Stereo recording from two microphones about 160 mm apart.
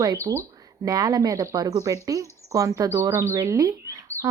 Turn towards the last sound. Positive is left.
turn(degrees=-20)  # may be behind; listen again after turning